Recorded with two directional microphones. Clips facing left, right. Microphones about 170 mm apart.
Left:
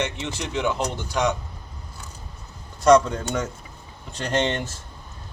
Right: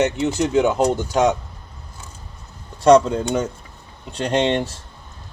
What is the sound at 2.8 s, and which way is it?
Speech, 30° right (ahead or behind).